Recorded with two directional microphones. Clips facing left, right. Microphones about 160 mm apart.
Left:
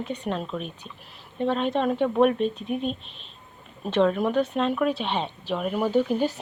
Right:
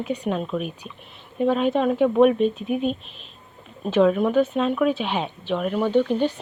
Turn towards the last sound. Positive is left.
turn(degrees=5)  # may be behind; listen again after turning